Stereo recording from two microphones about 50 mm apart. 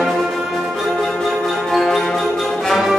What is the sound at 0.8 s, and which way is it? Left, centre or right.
Music, centre.